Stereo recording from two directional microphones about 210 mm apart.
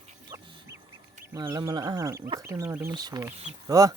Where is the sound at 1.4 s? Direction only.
15° right (ahead or behind).